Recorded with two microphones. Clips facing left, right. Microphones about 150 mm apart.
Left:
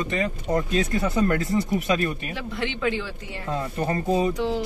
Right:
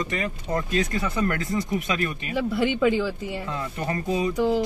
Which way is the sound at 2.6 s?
5° right (ahead or behind).